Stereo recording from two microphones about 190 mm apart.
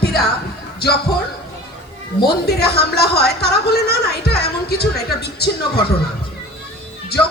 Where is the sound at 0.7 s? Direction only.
55° left (ahead or behind).